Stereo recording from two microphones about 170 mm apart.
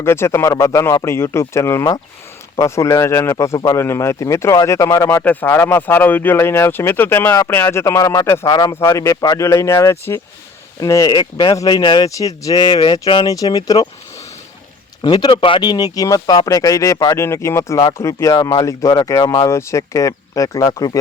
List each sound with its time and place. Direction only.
0.0 s a man's voice: 15° left (ahead or behind)
15.0 s speech: 25° left (ahead or behind)